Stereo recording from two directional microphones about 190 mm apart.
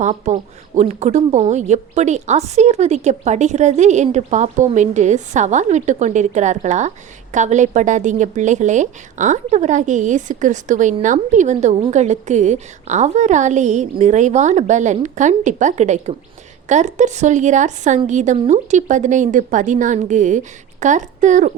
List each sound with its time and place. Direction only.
0.0 s a woman's voice: 40° right (ahead or behind)